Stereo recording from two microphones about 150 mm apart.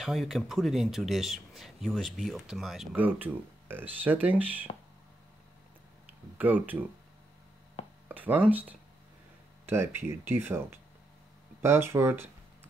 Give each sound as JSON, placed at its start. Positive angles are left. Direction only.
{"t": 0.0, "sound": "speech", "side_deg": 0}
{"t": 6.3, "sound": "speech", "side_deg": -10}
{"t": 8.1, "sound": "speech", "side_deg": -10}